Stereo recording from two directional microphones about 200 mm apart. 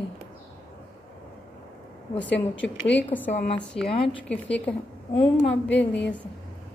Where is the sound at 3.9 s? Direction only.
30° left (ahead or behind).